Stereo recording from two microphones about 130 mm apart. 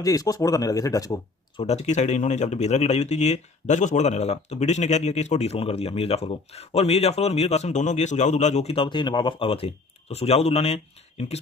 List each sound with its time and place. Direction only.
0.0 s speech: 30° left (ahead or behind)
1.6 s speech: 60° left (ahead or behind)